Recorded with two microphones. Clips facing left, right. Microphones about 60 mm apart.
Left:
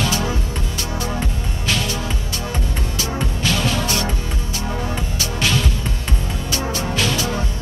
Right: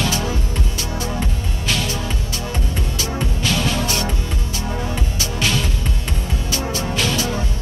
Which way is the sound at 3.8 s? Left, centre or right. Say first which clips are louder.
Even; left.